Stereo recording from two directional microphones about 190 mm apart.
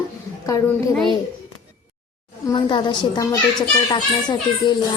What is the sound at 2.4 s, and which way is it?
A woman's voice, 25° left (ahead or behind).